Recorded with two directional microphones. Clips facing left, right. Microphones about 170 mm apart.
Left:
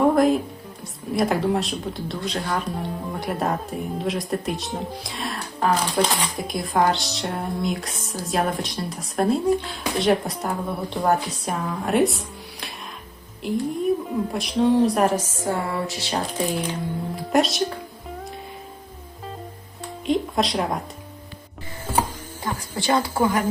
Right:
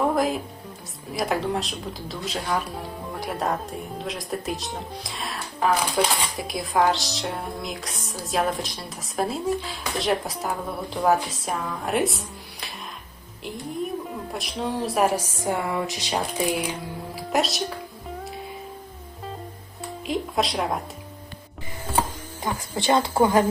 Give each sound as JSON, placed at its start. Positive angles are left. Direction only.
{"t": 0.1, "sound": "music", "side_deg": 0}
{"t": 1.1, "sound": "speech", "side_deg": 0}
{"t": 19.8, "sound": "speech", "side_deg": 0}
{"t": 22.7, "sound": "speech", "side_deg": -20}